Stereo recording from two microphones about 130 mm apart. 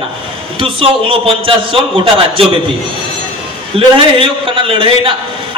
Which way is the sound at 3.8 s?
45° right (ahead or behind).